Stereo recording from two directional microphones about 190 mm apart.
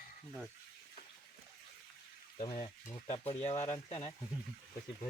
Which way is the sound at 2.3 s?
25° left (ahead or behind).